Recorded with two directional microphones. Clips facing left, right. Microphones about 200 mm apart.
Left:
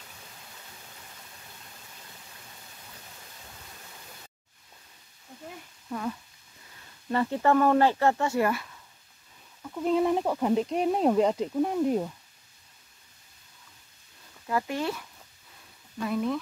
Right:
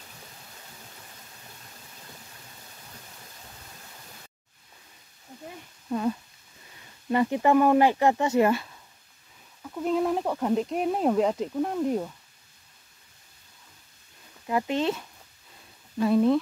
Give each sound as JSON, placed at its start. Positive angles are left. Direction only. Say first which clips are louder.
{"t": 5.9, "sound": "speech", "louder": "right 6 dB", "side_deg": -25}
{"t": 9.6, "sound": "speech", "louder": "left 1 dB", "side_deg": 0}
{"t": 14.5, "sound": "speech", "louder": "right 3 dB", "side_deg": -20}